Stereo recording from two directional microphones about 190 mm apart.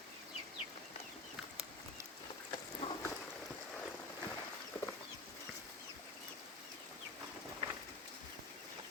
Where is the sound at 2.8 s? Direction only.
35° left (ahead or behind).